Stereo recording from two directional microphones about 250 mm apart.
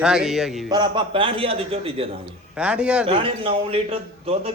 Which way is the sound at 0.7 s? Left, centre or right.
Centre.